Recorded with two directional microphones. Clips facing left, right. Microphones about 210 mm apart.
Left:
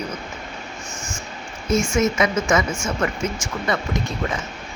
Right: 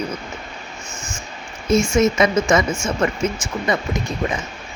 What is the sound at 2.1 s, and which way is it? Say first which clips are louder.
Speech: right 3 dB; 35° right (ahead or behind).